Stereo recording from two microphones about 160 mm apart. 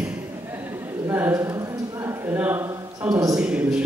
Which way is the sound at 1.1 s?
15° right (ahead or behind).